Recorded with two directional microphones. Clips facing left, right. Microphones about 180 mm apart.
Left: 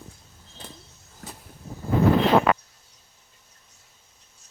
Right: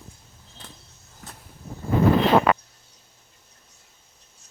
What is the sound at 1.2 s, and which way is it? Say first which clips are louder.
Vehicle: left 3 dB; 45° left (ahead or behind).